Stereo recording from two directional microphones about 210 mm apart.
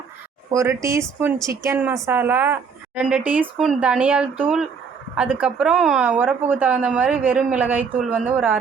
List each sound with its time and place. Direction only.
0.5 s a woman's voice: 15° right (ahead or behind)